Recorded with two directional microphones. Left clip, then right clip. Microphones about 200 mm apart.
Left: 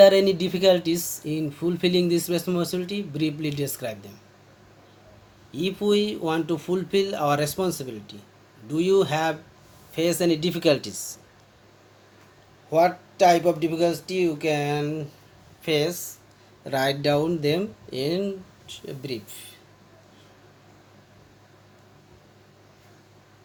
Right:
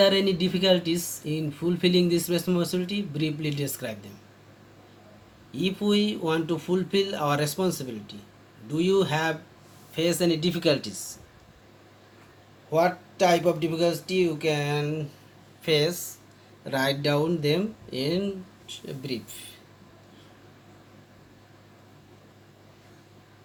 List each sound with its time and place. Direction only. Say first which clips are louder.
0.0 s speech: left 6 dB; 55° left (ahead or behind)
5.5 s speech: left 3 dB; 55° left (ahead or behind)
12.7 s speech: left 3 dB; 50° left (ahead or behind)